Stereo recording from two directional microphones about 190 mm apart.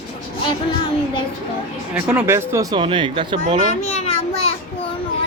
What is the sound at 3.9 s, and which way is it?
Child singing, 35° left (ahead or behind).